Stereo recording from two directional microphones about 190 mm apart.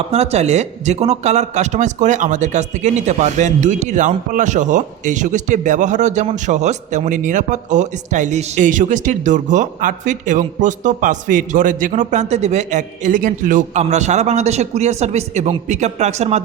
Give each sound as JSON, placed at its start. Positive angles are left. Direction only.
{"t": 0.1, "sound": "a man's voice", "side_deg": -35}